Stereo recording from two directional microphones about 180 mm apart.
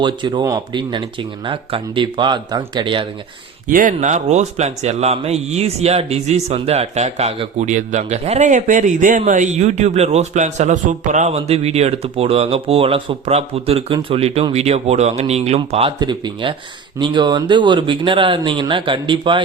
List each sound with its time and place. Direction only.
0.0 s speech: 25° right (ahead or behind)
3.7 s a man's voice: 50° right (ahead or behind)
16.0 s speech: 25° right (ahead or behind)